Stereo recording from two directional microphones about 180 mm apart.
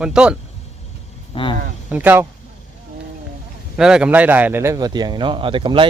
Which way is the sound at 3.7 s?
5° right (ahead or behind).